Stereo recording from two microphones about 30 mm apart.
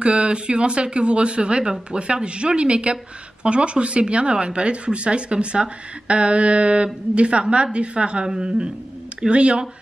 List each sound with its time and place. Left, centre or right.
0.0 s a woman's voice: right